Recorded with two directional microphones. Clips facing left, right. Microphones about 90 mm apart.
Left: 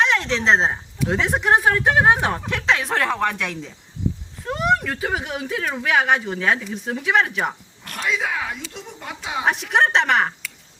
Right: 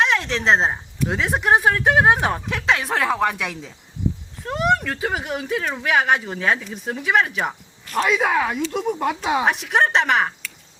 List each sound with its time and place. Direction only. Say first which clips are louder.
0.0 s speech: even; centre (ahead or behind)
7.9 s speech: right 6 dB; 55° right (ahead or behind)
9.4 s speech: left 4 dB; centre (ahead or behind)